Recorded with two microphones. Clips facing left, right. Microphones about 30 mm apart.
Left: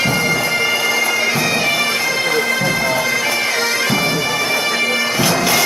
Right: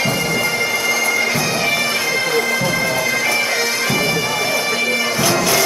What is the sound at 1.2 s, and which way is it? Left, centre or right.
Bagpipes, left.